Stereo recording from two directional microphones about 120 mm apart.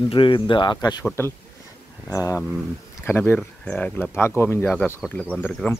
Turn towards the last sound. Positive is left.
turn(degrees=10)  # may be behind; listen again after turning